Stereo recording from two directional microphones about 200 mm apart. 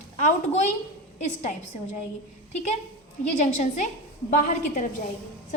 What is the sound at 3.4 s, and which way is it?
Speech, 35° left (ahead or behind).